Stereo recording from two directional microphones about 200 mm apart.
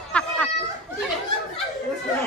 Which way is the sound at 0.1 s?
5° left (ahead or behind).